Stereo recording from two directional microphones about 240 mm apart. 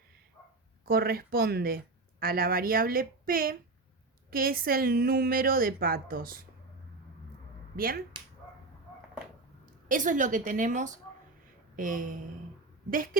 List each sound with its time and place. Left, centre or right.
0.9 s a woman's voice: right
7.8 s a woman's voice: right
9.6 s a woman's voice: right